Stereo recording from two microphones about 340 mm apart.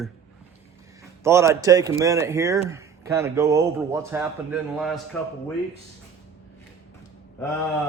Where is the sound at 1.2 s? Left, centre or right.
Centre.